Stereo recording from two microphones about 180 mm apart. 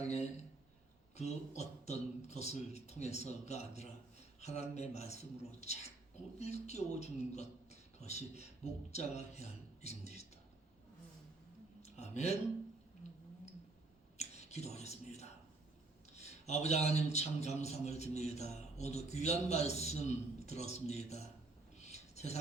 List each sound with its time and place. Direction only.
1.1 s a man's voice: 40° left (ahead or behind)
11.8 s speech: 40° left (ahead or behind)
13.0 s tick-tock: 40° left (ahead or behind)
14.2 s a sound: 35° left (ahead or behind)
16.1 s a man's voice: 35° left (ahead or behind)
21.8 s a sound: 40° left (ahead or behind)